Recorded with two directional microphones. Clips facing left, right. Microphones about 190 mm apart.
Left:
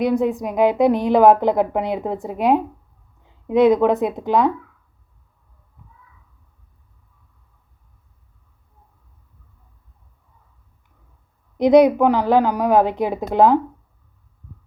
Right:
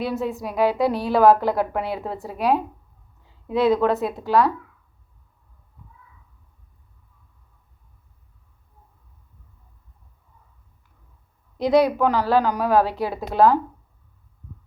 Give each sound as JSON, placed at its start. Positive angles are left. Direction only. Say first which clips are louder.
{"t": 0.0, "sound": "a woman's voice", "louder": "left 7 dB", "side_deg": 15}
{"t": 11.5, "sound": "a woman's voice", "louder": "left 6 dB", "side_deg": 20}